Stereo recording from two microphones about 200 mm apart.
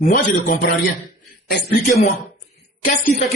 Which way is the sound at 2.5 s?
40° left (ahead or behind).